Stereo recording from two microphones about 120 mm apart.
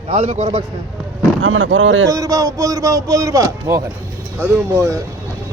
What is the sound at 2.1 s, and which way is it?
Speech, 25° right (ahead or behind).